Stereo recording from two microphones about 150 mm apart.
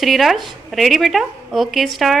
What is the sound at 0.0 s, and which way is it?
A woman's voice, centre (ahead or behind).